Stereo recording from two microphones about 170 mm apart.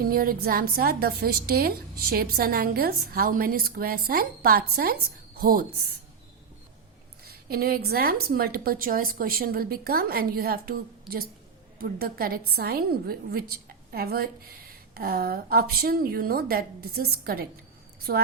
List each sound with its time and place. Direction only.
0.0 s a woman's voice: 60° right (ahead or behind)
7.3 s a woman's voice: 65° right (ahead or behind)
11.1 s a woman's voice: centre (ahead or behind)
11.8 s a woman's voice: 60° right (ahead or behind)